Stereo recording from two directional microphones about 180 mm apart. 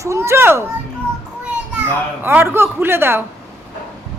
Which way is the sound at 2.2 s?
10° right (ahead or behind).